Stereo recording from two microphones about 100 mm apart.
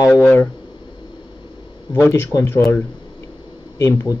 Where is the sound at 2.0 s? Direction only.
30° left (ahead or behind).